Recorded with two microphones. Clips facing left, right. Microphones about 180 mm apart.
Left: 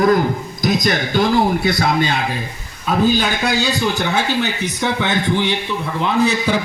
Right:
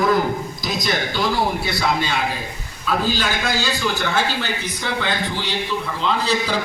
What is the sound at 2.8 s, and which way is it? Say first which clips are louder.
A man's voice: left 5 dB; 55° left (ahead or behind).